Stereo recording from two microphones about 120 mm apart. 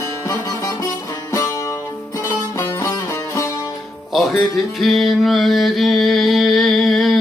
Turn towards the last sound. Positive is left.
turn(degrees=0)  # may be behind; listen again after turning